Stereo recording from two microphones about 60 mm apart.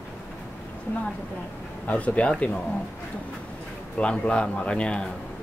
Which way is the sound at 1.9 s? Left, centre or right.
Left.